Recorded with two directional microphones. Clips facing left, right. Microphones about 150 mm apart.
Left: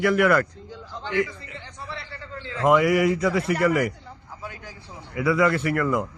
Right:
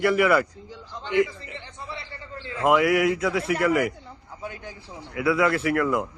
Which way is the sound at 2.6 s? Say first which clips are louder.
Left 1 dB; centre (ahead or behind).